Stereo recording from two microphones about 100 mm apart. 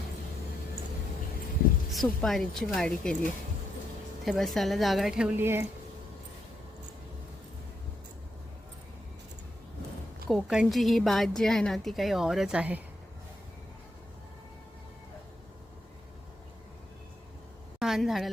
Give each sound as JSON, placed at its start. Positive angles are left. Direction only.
{"t": 1.9, "sound": "a woman's voice", "side_deg": 0}
{"t": 4.3, "sound": "a woman's voice", "side_deg": 0}
{"t": 5.4, "sound": "speech", "side_deg": -20}
{"t": 10.2, "sound": "a woman's voice", "side_deg": -5}
{"t": 17.7, "sound": "a sound", "side_deg": -5}